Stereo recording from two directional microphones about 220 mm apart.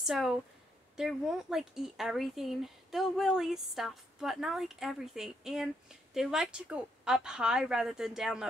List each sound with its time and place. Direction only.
0.0 s speech: centre (ahead or behind)